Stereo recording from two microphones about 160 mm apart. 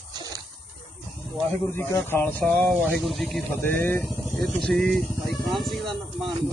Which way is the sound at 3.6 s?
15° left (ahead or behind).